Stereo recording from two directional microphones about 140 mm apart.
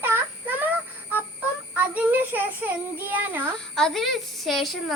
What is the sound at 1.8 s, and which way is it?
A child's voice, 10° right (ahead or behind).